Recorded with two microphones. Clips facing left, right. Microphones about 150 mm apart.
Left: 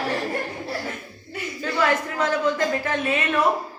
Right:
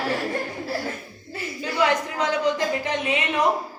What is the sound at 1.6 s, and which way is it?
A woman's voice, 15° right (ahead or behind).